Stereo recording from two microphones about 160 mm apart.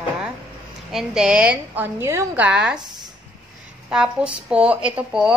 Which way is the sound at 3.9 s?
5° right (ahead or behind).